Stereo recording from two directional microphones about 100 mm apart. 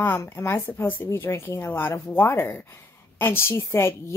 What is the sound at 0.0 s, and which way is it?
Speech, 25° left (ahead or behind).